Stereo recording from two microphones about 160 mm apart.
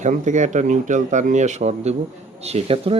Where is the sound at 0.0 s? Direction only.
50° right (ahead or behind).